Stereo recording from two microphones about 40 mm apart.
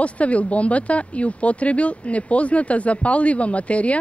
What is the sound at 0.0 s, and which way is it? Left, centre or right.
Speech, left.